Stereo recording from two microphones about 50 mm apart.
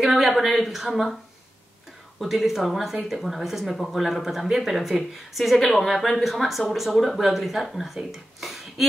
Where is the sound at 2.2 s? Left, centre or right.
Centre.